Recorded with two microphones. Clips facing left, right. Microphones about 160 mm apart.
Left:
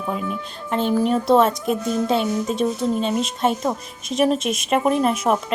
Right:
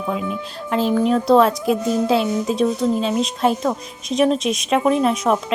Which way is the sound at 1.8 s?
25° right (ahead or behind).